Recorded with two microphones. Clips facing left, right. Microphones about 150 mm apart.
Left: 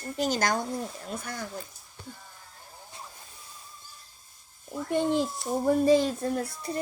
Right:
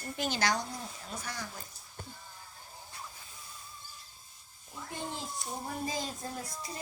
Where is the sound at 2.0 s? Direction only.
45° right (ahead or behind).